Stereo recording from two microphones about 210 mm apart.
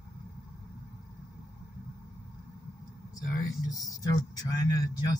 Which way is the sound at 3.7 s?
15° left (ahead or behind).